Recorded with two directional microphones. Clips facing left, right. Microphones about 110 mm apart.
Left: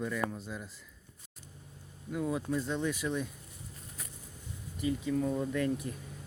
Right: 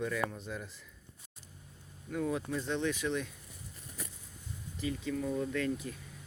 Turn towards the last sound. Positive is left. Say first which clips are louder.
# left 2 dB
turn(degrees=30)  # may be behind; listen again after turning